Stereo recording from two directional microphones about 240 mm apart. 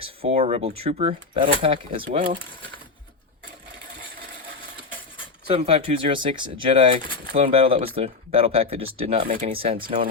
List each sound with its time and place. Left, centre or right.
0.2 s speech: right
5.5 s speech: right
9.7 s speech: right